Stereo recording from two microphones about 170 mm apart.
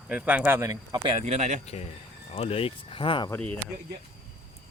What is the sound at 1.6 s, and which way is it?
Speech, 40° left (ahead or behind).